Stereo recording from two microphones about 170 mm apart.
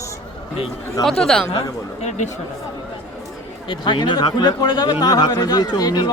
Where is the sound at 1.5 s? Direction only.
40° left (ahead or behind).